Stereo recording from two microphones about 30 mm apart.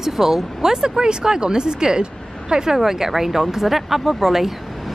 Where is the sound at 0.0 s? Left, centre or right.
Centre.